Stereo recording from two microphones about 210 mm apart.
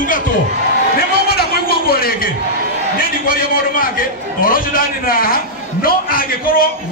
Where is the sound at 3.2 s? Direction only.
45° left (ahead or behind).